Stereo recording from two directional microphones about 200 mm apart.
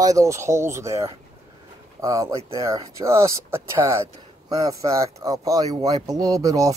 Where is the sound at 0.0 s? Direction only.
15° right (ahead or behind).